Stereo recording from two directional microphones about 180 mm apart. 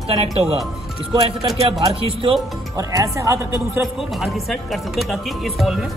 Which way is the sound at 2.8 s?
20° right (ahead or behind).